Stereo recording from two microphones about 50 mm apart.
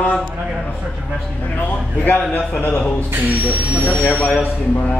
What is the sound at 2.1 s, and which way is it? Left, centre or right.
Speech, left.